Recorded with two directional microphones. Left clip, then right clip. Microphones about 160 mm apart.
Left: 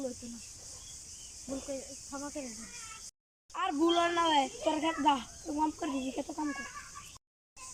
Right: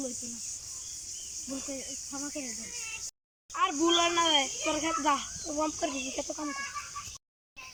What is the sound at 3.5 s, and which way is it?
Speech, 20° left (ahead or behind).